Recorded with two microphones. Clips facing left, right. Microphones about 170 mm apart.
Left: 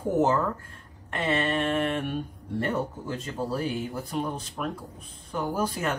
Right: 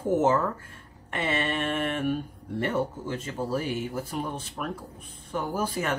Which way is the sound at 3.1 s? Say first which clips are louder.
Left 1 dB; 5° right (ahead or behind).